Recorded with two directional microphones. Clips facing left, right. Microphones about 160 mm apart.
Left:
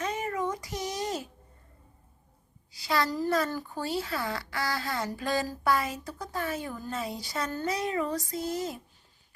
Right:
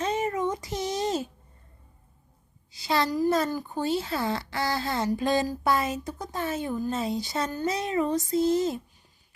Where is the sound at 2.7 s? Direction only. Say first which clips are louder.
Right 3 dB; 25° right (ahead or behind).